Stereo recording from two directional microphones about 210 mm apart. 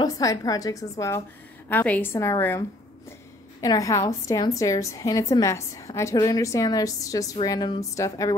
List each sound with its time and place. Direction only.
0.0 s a woman's voice: 15° left (ahead or behind)
3.6 s a woman's voice: 15° left (ahead or behind)